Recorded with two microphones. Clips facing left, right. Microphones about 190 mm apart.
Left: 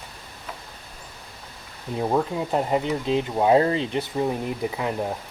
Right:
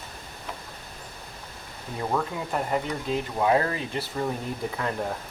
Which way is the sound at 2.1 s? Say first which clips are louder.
Left 5 dB; 25° left (ahead or behind).